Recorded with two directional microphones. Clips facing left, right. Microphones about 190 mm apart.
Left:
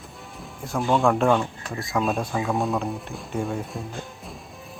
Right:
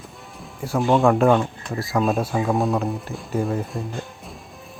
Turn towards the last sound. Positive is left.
turn(degrees=0)  # may be behind; listen again after turning